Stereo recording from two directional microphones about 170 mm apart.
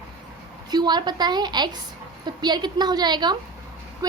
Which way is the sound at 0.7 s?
25° right (ahead or behind).